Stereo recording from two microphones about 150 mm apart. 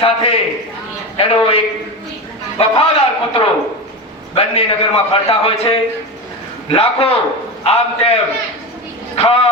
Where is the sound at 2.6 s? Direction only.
40° left (ahead or behind).